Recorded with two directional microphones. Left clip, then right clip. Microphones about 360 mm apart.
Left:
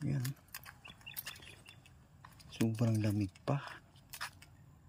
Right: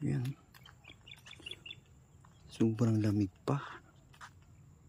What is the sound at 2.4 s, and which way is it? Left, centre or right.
Speech, centre.